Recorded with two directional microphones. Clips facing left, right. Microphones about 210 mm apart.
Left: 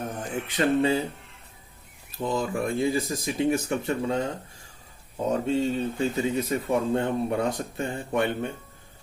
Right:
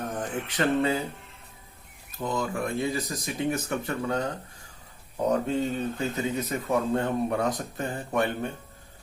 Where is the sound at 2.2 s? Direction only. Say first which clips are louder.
Left 2 dB; 30° left (ahead or behind).